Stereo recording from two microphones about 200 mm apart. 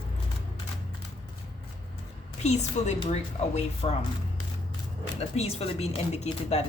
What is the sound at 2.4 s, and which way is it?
Speech, 35° left (ahead or behind).